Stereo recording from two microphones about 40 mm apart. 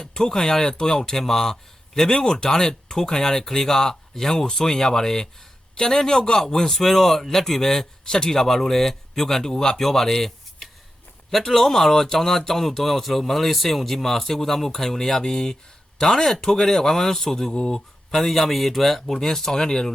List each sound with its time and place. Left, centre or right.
0.0 s a man's voice: centre
17.5 s speech: left
17.7 s a man's voice: centre